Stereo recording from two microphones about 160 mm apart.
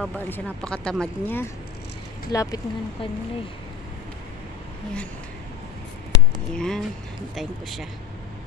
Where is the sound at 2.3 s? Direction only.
25° left (ahead or behind).